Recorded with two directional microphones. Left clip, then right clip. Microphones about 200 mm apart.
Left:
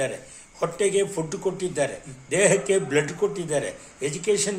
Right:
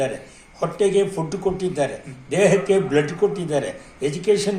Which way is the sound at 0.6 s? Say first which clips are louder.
Right 4 dB; 20° left (ahead or behind).